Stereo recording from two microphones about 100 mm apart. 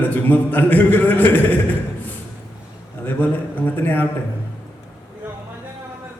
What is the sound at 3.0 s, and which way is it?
A man's voice, 20° left (ahead or behind).